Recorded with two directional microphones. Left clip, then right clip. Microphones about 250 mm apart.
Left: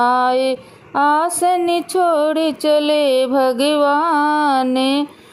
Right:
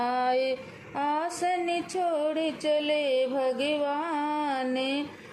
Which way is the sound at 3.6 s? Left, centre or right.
Left.